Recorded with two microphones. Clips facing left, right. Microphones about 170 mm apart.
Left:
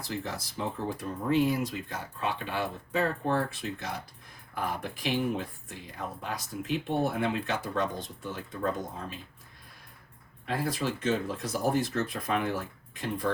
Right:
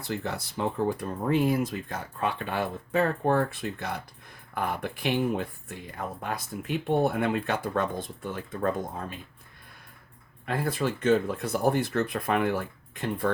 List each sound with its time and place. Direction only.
0.0 s speech: 60° right (ahead or behind)
10.4 s speech: 55° right (ahead or behind)